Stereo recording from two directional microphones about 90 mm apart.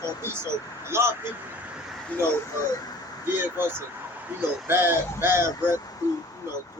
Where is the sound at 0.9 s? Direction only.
30° right (ahead or behind).